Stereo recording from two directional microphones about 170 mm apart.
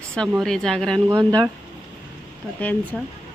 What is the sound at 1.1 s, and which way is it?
Speech, 25° right (ahead or behind).